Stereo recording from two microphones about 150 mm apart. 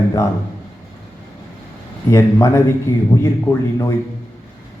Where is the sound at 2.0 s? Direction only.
20° left (ahead or behind).